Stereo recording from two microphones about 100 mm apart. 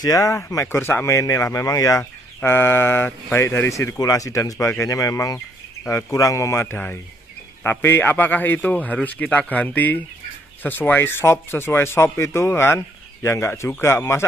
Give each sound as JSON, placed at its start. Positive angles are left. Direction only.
{"t": 0.0, "sound": "speech", "side_deg": 35}